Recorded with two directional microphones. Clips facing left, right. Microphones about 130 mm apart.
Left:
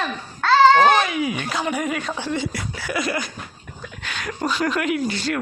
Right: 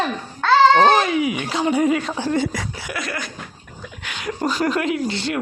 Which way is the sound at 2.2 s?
45° right (ahead or behind).